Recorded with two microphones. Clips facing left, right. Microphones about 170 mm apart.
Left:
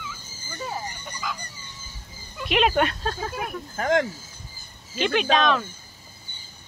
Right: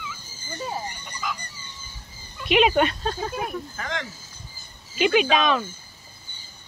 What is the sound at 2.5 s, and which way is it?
Speech, centre (ahead or behind).